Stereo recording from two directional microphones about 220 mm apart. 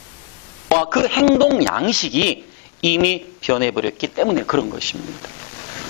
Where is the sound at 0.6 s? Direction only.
20° left (ahead or behind).